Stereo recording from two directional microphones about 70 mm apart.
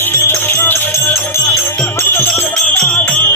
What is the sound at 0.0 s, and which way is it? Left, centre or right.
Music, left.